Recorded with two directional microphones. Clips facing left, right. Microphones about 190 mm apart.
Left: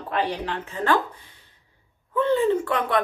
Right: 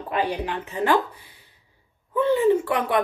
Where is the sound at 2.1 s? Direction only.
15° right (ahead or behind).